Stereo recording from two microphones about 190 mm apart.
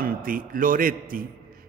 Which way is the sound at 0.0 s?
50° right (ahead or behind).